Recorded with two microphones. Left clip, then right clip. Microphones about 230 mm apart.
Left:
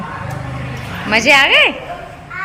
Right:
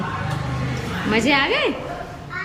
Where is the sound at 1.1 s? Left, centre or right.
Centre.